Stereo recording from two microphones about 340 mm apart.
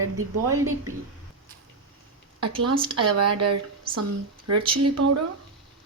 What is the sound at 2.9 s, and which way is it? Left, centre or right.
Speech, right.